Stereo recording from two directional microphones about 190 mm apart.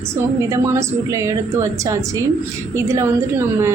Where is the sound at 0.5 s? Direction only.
15° right (ahead or behind).